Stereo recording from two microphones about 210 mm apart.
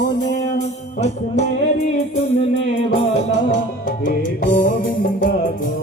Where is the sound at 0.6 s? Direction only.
30° left (ahead or behind).